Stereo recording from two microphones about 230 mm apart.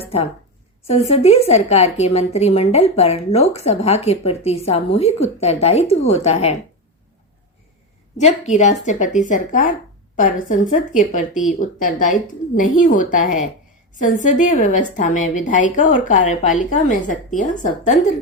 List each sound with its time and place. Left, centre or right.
0.9 s a woman's voice: left
8.2 s a woman's voice: left